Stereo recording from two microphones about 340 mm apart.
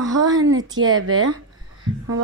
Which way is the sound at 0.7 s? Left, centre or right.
Right.